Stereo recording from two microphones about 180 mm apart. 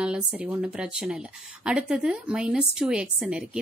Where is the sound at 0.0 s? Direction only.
5° right (ahead or behind).